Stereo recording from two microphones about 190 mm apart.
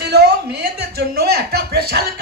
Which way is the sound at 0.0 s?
60° right (ahead or behind).